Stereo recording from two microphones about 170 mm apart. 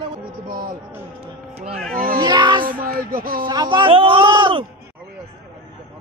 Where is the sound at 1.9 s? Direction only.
60° right (ahead or behind).